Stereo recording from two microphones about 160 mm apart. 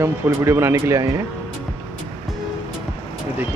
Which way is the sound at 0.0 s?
15° right (ahead or behind).